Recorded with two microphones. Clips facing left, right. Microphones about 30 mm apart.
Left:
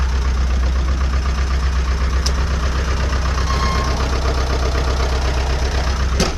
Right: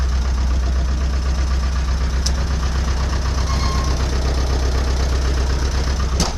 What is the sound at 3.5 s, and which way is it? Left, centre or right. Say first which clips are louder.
Vehicle: left 4 dB; left.